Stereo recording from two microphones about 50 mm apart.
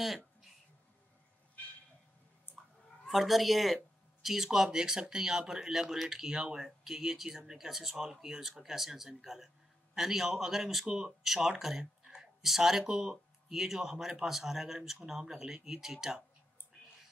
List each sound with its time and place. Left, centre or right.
0.0 s a sound: centre
2.5 s clicking: left
3.1 s speech: centre